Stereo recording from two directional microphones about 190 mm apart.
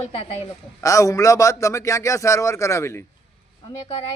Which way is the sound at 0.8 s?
15° left (ahead or behind).